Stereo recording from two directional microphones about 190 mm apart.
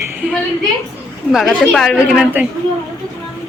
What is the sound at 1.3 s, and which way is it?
Speech, centre (ahead or behind).